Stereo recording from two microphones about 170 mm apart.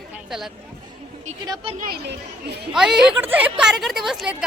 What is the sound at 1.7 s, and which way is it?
Speech, 60° right (ahead or behind).